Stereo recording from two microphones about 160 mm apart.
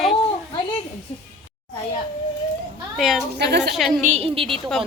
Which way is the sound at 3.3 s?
90° right.